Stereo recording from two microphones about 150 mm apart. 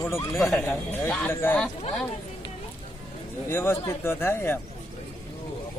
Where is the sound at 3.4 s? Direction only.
15° left (ahead or behind).